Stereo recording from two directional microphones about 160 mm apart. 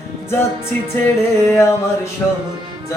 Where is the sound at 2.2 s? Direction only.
10° left (ahead or behind).